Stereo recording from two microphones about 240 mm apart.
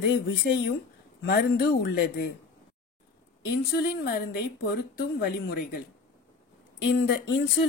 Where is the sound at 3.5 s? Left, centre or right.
Left.